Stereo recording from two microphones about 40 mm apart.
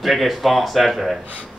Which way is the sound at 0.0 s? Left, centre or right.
Centre.